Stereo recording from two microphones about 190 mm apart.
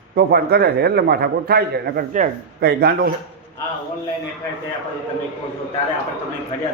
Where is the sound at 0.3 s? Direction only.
55° right (ahead or behind).